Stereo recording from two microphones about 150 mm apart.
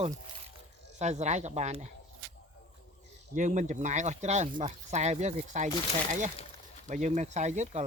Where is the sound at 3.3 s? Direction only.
55° right (ahead or behind).